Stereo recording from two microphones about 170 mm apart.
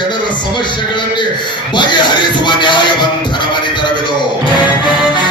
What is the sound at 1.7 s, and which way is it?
Speech, 25° left (ahead or behind).